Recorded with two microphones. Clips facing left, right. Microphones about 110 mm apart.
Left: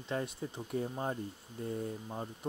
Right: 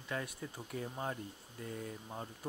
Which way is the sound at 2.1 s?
15° left (ahead or behind).